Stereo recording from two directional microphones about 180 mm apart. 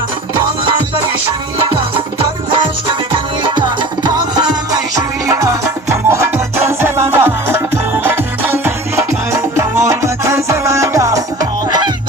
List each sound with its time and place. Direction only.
3.5 s music: 25° right (ahead or behind)